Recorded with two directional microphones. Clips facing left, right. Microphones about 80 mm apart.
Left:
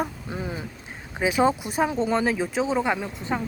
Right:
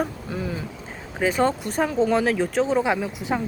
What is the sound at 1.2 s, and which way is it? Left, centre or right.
Speech, centre.